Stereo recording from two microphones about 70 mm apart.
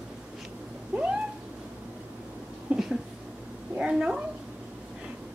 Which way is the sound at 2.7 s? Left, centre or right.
Centre.